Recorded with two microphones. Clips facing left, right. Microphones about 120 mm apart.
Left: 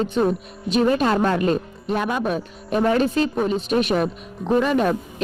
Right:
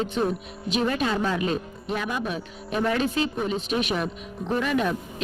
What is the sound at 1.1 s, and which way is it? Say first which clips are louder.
Speech: left 6 dB; 55° left (ahead or behind).